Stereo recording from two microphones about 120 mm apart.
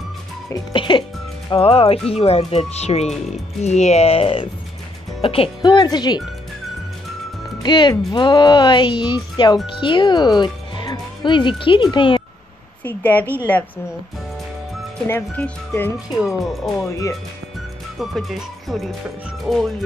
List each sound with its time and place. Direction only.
0.7 s speech: 40° left (ahead or behind)
7.6 s speech: 40° left (ahead or behind)
12.8 s speech: 15° left (ahead or behind)
15.0 s speech: 15° left (ahead or behind)
16.2 s music: centre (ahead or behind)
17.9 s music: centre (ahead or behind)